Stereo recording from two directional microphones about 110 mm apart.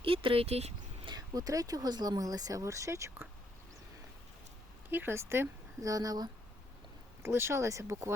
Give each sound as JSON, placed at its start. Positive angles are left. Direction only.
{"t": 0.0, "sound": "speech", "side_deg": -55}
{"t": 1.0, "sound": "speech", "side_deg": -35}
{"t": 4.9, "sound": "speech", "side_deg": -20}
{"t": 7.2, "sound": "speech", "side_deg": -25}